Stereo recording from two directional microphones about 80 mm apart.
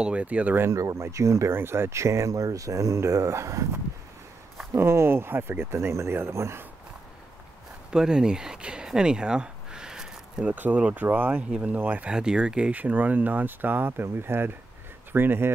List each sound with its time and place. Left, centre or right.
0.0 s speech: centre
0.7 s speech: right
7.9 s a sound: centre
10.5 s speech: centre